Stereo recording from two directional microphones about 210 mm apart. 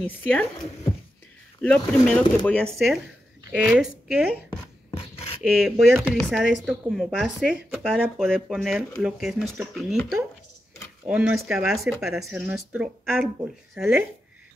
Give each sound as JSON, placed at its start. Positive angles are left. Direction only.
{"t": 0.0, "sound": "speech", "side_deg": 5}
{"t": 1.6, "sound": "speech", "side_deg": 5}
{"t": 4.9, "sound": "scratch", "side_deg": 30}
{"t": 5.5, "sound": "speech", "side_deg": 0}
{"t": 11.1, "sound": "speech", "side_deg": -5}